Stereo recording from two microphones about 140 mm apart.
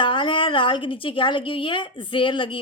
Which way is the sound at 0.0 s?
35° left (ahead or behind).